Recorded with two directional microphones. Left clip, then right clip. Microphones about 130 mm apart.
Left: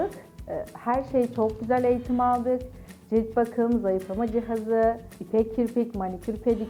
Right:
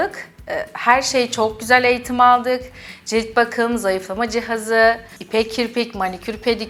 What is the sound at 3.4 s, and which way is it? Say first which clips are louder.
A woman's voice: right 7 dB; 30° left (ahead or behind).